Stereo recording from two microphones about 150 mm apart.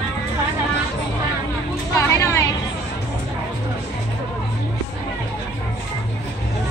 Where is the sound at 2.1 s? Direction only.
20° left (ahead or behind).